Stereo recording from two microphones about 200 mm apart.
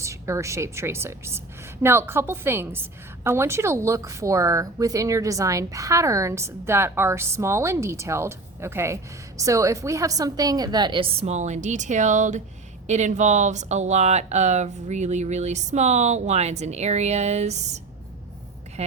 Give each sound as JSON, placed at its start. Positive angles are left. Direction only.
{"t": 0.0, "sound": "a woman's voice", "side_deg": -15}
{"t": 18.8, "sound": "speech", "side_deg": -30}